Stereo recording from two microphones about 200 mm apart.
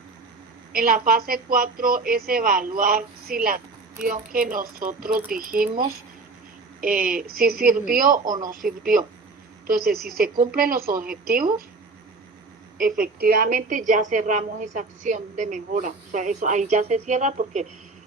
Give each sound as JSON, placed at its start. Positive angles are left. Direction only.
{"t": 0.7, "sound": "a woman's voice", "side_deg": -45}
{"t": 6.8, "sound": "a woman's voice", "side_deg": -45}
{"t": 12.8, "sound": "a woman's voice", "side_deg": -45}